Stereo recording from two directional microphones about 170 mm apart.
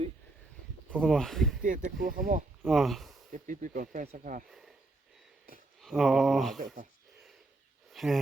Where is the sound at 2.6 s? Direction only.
Centre (ahead or behind).